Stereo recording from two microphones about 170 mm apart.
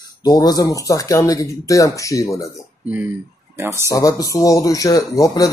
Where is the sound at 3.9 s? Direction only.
20° left (ahead or behind).